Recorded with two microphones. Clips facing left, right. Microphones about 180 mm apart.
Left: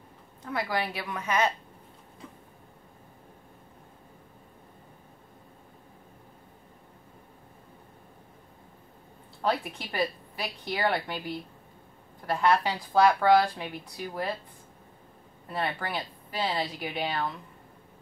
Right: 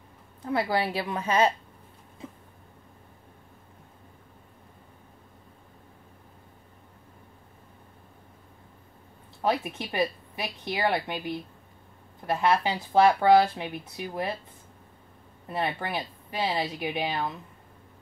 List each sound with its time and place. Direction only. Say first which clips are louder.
0.4 s speech: right 4 dB; 30° right (ahead or behind)
9.5 s speech: right 2 dB; 20° right (ahead or behind)
15.5 s speech: right 2 dB; 20° right (ahead or behind)